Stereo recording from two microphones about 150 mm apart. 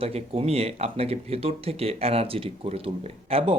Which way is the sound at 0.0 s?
40° right (ahead or behind).